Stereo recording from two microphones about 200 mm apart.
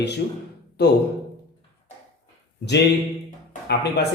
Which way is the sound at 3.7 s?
55° left (ahead or behind).